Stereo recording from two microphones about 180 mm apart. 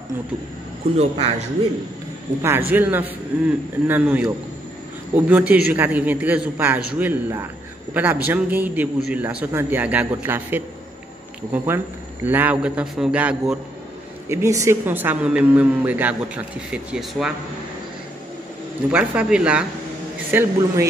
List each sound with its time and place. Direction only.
0.9 s a man's voice: 35° right (ahead or behind)
2.4 s a woman's voice: 10° right (ahead or behind)
18.9 s a woman's voice: 5° right (ahead or behind)